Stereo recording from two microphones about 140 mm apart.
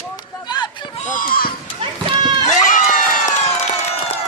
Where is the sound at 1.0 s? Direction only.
80° left.